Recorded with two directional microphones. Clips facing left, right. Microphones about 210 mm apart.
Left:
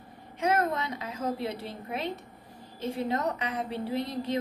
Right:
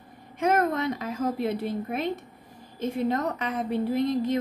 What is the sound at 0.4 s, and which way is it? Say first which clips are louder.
A woman's voice: right 4 dB; 55° right (ahead or behind).